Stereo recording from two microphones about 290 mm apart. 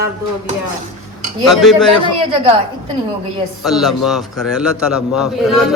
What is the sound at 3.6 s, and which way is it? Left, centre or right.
A man's voice, centre.